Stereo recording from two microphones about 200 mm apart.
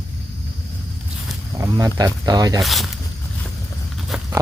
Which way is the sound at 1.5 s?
15° right (ahead or behind).